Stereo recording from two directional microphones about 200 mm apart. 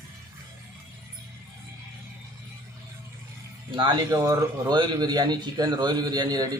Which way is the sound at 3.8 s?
20° right (ahead or behind).